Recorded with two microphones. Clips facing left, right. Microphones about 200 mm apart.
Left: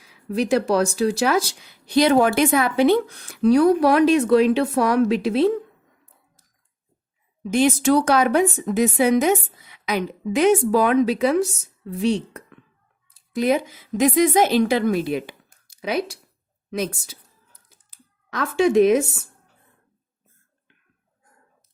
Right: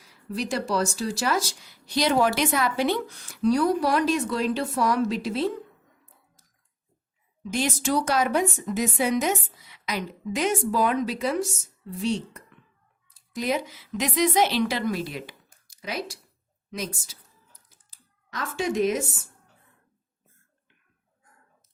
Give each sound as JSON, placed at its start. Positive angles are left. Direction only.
{"t": 0.3, "sound": "speech", "side_deg": 60}
{"t": 7.5, "sound": "speech", "side_deg": 60}
{"t": 13.3, "sound": "a woman's voice", "side_deg": 55}